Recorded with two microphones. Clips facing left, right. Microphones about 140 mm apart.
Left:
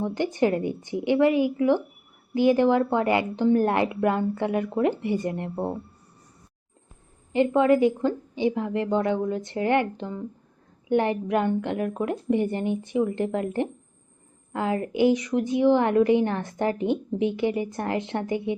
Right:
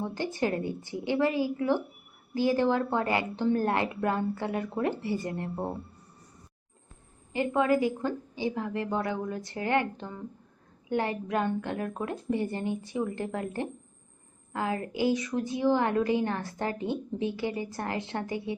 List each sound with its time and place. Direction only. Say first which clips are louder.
0.0 s speech: left 6 dB; 20° left (ahead or behind)
7.3 s speech: left 6 dB; 25° left (ahead or behind)